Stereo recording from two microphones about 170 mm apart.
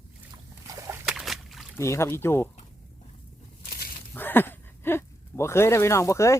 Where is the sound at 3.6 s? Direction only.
65° left (ahead or behind).